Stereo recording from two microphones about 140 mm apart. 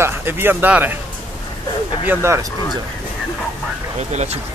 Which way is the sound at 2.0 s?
20° right (ahead or behind).